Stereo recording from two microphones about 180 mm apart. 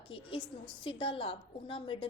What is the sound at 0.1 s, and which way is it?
A woman's voice, 30° left (ahead or behind).